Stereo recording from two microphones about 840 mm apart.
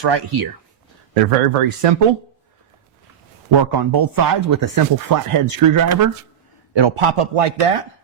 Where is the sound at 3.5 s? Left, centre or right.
Right.